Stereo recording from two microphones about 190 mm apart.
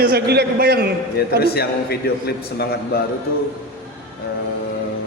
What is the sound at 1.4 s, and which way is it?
A man's voice, 55° left (ahead or behind).